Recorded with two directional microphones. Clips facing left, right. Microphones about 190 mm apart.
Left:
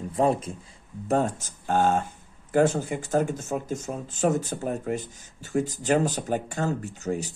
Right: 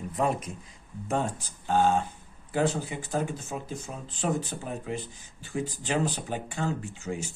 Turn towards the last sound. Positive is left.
turn(degrees=40)  # may be behind; listen again after turning